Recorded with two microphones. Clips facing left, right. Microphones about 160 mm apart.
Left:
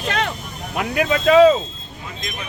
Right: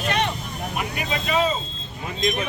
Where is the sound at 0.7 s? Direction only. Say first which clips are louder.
Left 9 dB; 90° left.